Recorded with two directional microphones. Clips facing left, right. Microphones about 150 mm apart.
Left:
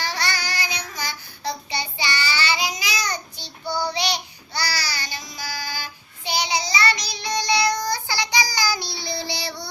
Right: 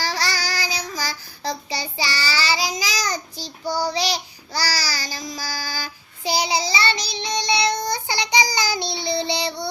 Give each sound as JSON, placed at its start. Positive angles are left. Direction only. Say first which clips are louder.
{"t": 0.0, "sound": "child singing", "louder": "right 2 dB", "side_deg": -35}